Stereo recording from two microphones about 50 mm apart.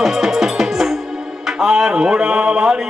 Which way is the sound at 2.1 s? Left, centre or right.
Right.